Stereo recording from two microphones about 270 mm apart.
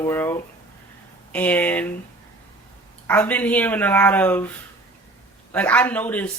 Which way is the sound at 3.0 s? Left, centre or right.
Centre.